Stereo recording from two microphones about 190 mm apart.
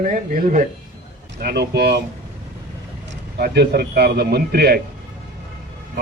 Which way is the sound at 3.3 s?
60° right (ahead or behind).